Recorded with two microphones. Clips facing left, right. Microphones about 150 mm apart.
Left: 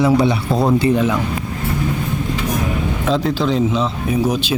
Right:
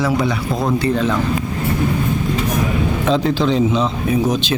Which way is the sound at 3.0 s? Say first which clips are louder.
Right 1 dB; centre (ahead or behind).